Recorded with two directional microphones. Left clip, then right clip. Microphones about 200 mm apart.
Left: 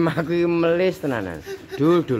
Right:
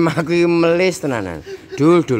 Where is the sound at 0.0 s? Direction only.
20° right (ahead or behind).